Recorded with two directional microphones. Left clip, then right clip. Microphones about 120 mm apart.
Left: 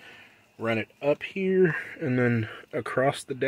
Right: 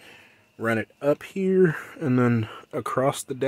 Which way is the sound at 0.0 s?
60° right (ahead or behind).